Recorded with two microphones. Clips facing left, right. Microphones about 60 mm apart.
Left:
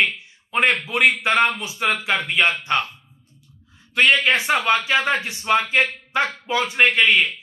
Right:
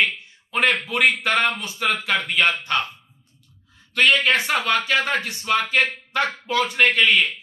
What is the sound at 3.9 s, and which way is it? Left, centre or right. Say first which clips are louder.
Speech: left 1 dB; left.